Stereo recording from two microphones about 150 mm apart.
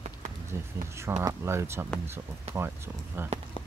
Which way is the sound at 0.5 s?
20° right (ahead or behind).